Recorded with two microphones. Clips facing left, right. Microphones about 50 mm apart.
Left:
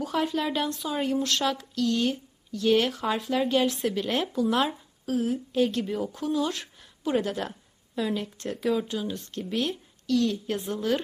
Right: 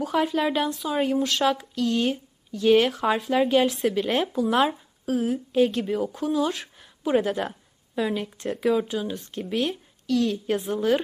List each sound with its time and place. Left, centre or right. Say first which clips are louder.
0.0 s speech: right 4 dB; centre
4.1 s speech: right 3 dB; centre
4.4 s a woman's voice: right 2 dB; centre